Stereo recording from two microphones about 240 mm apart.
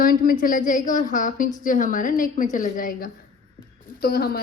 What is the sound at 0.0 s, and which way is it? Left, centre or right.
A woman's voice, left.